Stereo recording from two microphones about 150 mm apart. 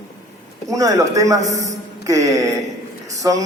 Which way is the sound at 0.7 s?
20° right (ahead or behind).